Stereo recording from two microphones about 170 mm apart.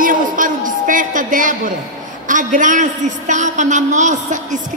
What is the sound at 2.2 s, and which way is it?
A man's voice, 50° right (ahead or behind).